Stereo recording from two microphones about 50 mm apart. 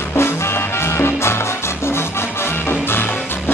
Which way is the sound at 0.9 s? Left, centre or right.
Left.